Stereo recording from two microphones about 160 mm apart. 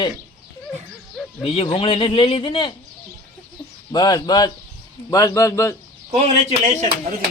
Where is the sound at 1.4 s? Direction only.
35° left (ahead or behind).